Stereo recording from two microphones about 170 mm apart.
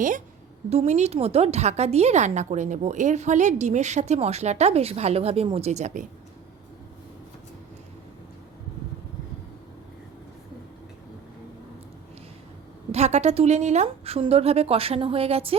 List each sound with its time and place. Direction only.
0.7 s a woman's voice: 40° right (ahead or behind)
12.9 s a woman's voice: 40° right (ahead or behind)